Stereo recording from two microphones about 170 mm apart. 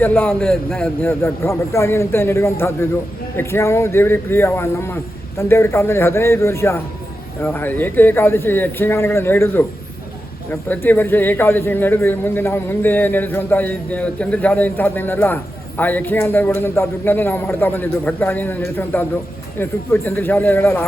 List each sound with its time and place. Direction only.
0.0 s a man's voice: 10° left (ahead or behind)
1.2 s a man's voice: 15° left (ahead or behind)